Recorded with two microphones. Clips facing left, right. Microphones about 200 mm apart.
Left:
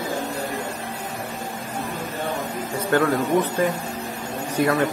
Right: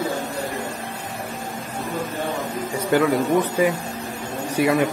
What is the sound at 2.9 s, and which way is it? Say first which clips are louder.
Speech: right 1 dB; 10° right (ahead or behind).